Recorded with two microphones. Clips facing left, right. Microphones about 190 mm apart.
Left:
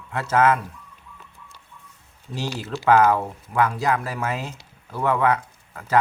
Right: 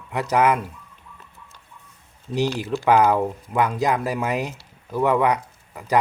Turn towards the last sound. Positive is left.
turn(degrees=-15)  # may be behind; listen again after turning